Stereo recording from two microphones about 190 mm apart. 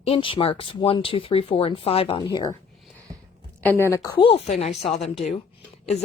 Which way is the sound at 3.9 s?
20° left (ahead or behind).